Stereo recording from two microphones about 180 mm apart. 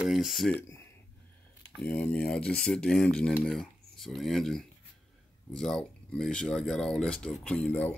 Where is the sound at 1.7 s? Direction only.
5° left (ahead or behind).